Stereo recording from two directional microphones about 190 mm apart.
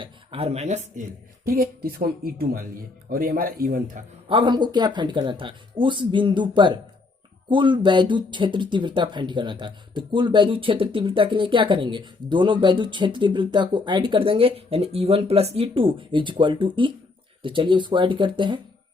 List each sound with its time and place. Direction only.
0.0 s speech: 30° right (ahead or behind)
0.9 s speech: 45° right (ahead or behind)
4.3 s speech: 25° right (ahead or behind)